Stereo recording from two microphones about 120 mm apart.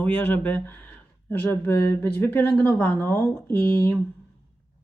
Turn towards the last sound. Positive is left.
turn(degrees=15)  # may be behind; listen again after turning